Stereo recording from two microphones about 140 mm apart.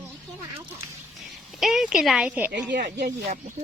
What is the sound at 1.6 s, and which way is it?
A woman's voice, 5° right (ahead or behind).